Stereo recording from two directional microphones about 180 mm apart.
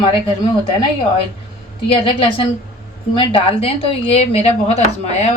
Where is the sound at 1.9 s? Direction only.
30° left (ahead or behind).